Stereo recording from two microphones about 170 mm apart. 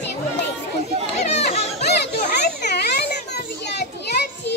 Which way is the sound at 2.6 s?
75° left (ahead or behind).